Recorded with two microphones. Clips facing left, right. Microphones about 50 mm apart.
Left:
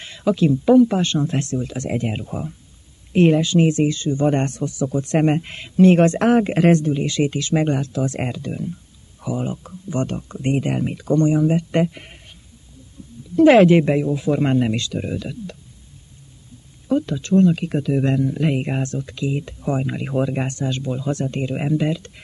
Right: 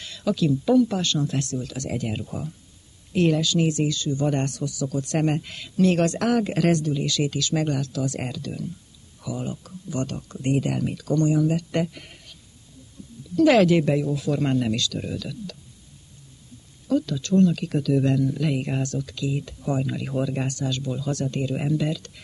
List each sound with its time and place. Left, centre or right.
0.0 s speech: left
13.4 s speech: left
16.8 s speech: left